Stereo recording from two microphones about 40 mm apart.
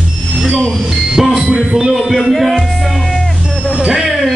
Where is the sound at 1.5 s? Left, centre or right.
Right.